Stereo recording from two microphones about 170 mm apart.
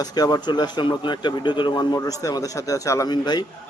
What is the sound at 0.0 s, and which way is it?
Speech, 25° left (ahead or behind).